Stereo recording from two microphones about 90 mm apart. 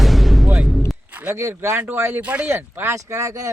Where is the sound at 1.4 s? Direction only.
35° right (ahead or behind).